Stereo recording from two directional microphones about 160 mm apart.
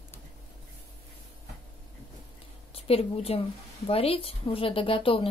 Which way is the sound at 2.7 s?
35° left (ahead or behind).